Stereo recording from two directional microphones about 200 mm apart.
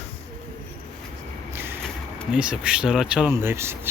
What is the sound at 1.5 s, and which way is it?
Vehicle, 10° right (ahead or behind).